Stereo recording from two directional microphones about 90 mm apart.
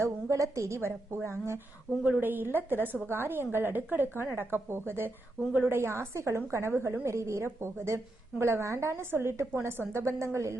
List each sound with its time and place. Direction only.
0.0 s a woman's voice: 35° right (ahead or behind)
1.9 s a woman's voice: centre (ahead or behind)
2.2 s a woman's voice: 20° right (ahead or behind)